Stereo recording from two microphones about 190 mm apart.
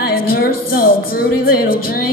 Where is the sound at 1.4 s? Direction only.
50° left (ahead or behind).